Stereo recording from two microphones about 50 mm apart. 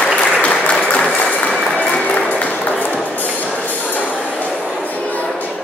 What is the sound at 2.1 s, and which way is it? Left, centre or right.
Music, left.